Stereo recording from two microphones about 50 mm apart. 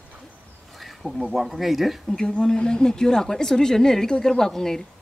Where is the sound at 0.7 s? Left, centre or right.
Centre.